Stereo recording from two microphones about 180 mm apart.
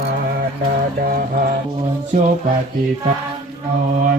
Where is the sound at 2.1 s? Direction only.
45° right (ahead or behind).